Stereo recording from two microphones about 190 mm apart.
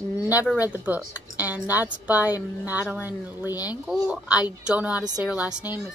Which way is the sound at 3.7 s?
5° right (ahead or behind).